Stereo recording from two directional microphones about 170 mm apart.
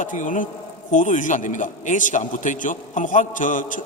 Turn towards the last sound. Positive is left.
turn(degrees=50)  # may be behind; listen again after turning